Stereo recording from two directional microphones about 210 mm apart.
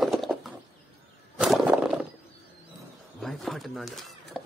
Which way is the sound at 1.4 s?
Centre (ahead or behind).